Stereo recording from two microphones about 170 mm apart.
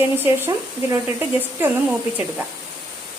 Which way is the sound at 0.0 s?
15° right (ahead or behind).